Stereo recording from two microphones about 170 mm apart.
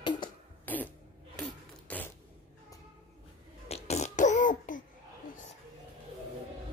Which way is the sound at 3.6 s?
40° left (ahead or behind).